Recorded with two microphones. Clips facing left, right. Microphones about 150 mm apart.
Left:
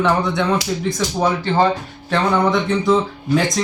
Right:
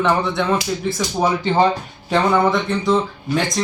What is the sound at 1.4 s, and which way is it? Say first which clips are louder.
Speech: right 1 dB; 15° right (ahead or behind).